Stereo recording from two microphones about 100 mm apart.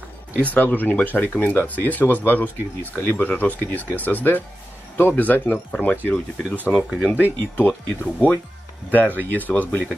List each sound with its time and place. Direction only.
0.4 s speech: 15° left (ahead or behind)
6.7 s speech: centre (ahead or behind)
7.5 s speech: 20° left (ahead or behind)